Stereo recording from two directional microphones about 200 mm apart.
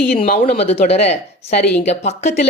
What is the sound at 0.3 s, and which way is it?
Speech, 45° left (ahead or behind).